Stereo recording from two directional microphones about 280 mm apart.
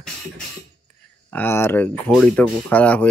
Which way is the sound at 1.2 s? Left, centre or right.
Centre.